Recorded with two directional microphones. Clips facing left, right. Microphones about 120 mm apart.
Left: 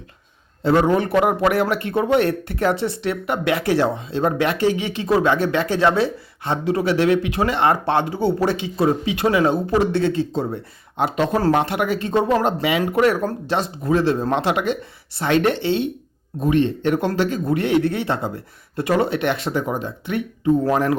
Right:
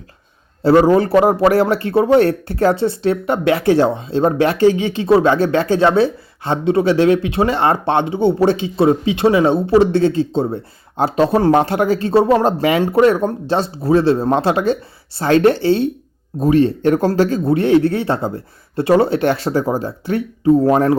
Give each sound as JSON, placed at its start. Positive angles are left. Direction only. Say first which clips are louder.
{"t": 0.6, "sound": "speech", "louder": "right 6 dB", "side_deg": -35}
{"t": 12.8, "sound": "speech", "louder": "right 5 dB", "side_deg": -30}